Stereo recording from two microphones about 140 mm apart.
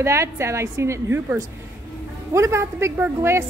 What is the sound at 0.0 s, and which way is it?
A woman's voice, 20° right (ahead or behind).